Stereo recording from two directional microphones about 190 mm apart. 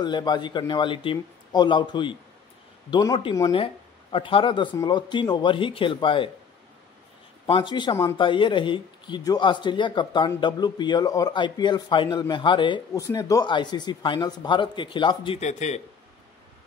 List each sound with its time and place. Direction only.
0.0 s speech: 20° left (ahead or behind)
7.4 s speech: 25° left (ahead or behind)
8.2 s speech: 25° left (ahead or behind)
15.4 s speech: 35° left (ahead or behind)